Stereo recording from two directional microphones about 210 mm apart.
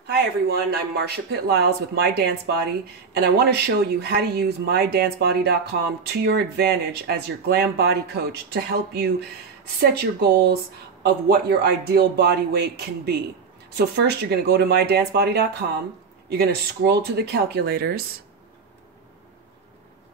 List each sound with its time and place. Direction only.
0.0 s speech: 50° right (ahead or behind)